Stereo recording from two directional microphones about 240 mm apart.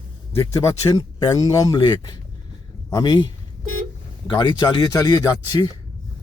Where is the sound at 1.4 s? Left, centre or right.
Centre.